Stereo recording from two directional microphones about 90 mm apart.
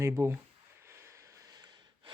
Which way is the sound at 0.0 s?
30° right (ahead or behind).